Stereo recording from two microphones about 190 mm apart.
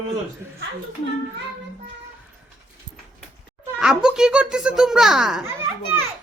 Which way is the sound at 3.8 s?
5° right (ahead or behind).